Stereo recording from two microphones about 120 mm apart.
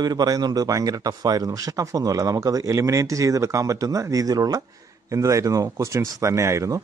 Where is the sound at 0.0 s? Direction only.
35° right (ahead or behind).